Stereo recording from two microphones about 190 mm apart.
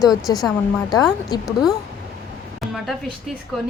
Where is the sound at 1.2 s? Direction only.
20° left (ahead or behind).